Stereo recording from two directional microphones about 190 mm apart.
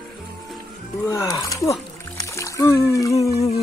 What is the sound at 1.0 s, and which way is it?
Speech, 15° left (ahead or behind).